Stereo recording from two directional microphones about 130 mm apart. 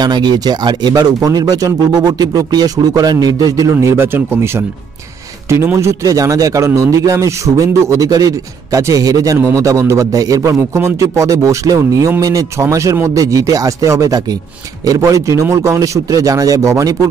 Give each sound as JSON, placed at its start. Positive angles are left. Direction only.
{"t": 0.0, "sound": "speech", "side_deg": -35}